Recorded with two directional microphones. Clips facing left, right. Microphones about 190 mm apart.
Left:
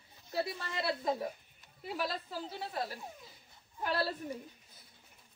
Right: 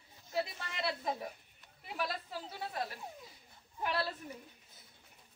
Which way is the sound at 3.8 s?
35° left (ahead or behind).